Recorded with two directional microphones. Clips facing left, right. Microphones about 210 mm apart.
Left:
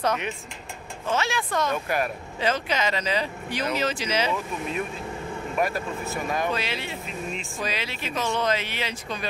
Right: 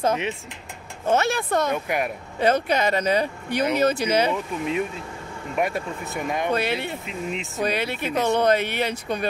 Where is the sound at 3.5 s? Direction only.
60° right (ahead or behind).